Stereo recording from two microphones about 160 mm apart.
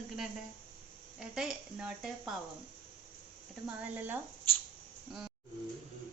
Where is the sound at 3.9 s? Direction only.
10° right (ahead or behind).